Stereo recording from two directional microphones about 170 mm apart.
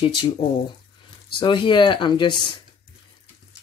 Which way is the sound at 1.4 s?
30° left (ahead or behind).